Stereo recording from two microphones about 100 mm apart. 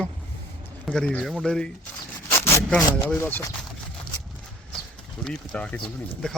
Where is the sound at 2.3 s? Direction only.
25° left (ahead or behind).